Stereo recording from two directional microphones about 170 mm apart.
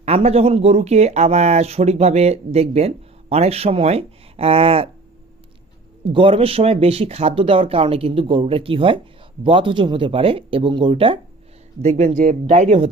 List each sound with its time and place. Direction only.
0.0 s speech: 40° right (ahead or behind)
6.1 s speech: 30° right (ahead or behind)
11.8 s speech: 45° right (ahead or behind)